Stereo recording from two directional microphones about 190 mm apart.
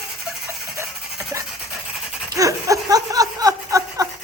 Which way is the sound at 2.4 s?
15° right (ahead or behind).